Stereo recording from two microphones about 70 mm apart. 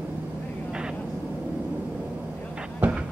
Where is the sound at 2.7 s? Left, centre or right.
Right.